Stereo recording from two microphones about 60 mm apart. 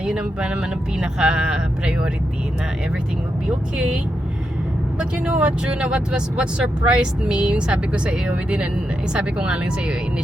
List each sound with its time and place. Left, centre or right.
0.0 s speech: centre
4.9 s speech: centre